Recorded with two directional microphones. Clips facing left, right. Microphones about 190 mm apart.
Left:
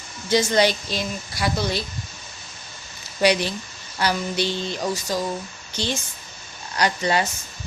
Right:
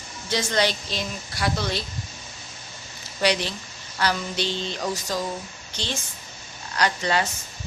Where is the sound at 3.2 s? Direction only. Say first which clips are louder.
Left 4 dB; 10° left (ahead or behind).